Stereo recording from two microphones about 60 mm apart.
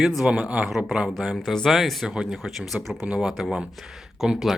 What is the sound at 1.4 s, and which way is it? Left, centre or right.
Speech, centre.